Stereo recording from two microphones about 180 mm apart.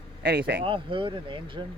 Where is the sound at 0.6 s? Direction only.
30° right (ahead or behind).